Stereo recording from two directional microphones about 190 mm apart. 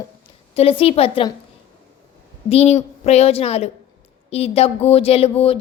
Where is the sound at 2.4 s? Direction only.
35° left (ahead or behind).